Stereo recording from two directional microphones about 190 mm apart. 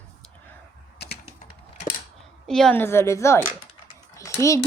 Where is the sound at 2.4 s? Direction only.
Centre (ahead or behind).